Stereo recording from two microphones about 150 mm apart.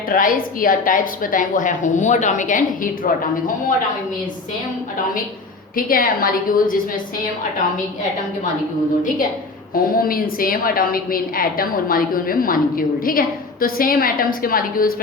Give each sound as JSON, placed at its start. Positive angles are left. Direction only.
{"t": 0.1, "sound": "a woman's voice", "side_deg": 65}
{"t": 5.7, "sound": "a woman's voice", "side_deg": 70}
{"t": 9.7, "sound": "a woman's voice", "side_deg": 75}